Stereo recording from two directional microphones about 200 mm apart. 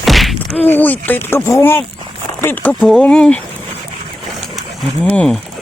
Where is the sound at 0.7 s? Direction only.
10° left (ahead or behind).